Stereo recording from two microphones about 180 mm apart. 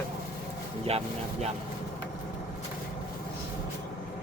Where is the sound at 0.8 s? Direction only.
35° right (ahead or behind).